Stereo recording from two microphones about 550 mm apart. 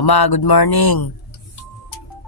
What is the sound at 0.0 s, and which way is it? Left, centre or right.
Speech, left.